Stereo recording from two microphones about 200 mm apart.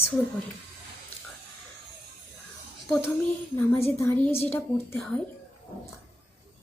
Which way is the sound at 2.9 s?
Centre (ahead or behind).